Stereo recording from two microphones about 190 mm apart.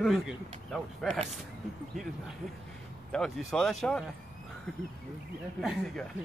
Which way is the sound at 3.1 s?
5° left (ahead or behind).